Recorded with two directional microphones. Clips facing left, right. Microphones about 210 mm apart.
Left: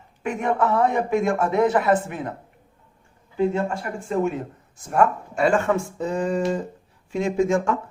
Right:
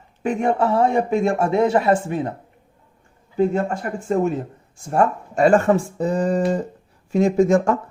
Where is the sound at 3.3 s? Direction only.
40° right (ahead or behind).